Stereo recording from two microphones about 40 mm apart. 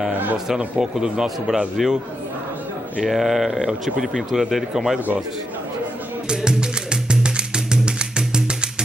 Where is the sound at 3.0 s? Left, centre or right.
Centre.